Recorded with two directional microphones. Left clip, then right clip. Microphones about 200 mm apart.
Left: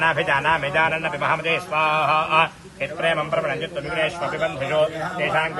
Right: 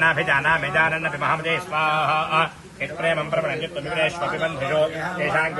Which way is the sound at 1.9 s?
25° left (ahead or behind).